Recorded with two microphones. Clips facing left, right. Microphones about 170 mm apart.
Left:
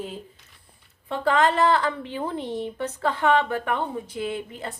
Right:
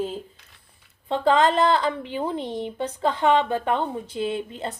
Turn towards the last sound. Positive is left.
turn(degrees=-25)  # may be behind; listen again after turning